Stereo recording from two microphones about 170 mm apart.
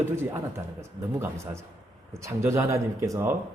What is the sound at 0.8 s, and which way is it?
Speech, 15° right (ahead or behind).